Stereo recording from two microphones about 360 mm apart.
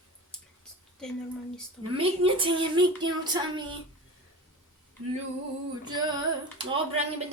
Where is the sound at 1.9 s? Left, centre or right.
Centre.